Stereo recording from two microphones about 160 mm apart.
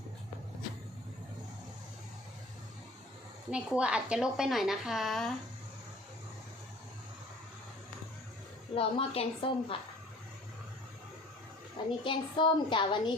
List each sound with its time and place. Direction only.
3.5 s a woman's voice: 5° right (ahead or behind)
8.7 s a woman's voice: 35° left (ahead or behind)
12.0 s a woman's voice: 30° left (ahead or behind)